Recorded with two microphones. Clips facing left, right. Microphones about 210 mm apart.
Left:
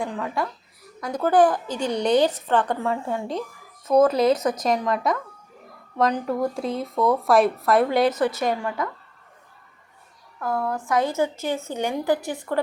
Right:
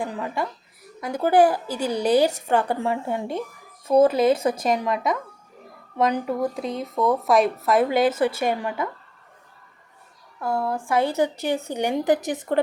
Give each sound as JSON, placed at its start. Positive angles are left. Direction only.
{"t": 0.0, "sound": "a woman's voice", "side_deg": -5}
{"t": 4.3, "sound": "a woman's voice", "side_deg": -25}
{"t": 4.6, "sound": "speech", "side_deg": -5}
{"t": 8.4, "sound": "a woman's voice", "side_deg": -25}
{"t": 10.4, "sound": "a woman's voice", "side_deg": -30}
{"t": 11.2, "sound": "a woman's voice", "side_deg": -15}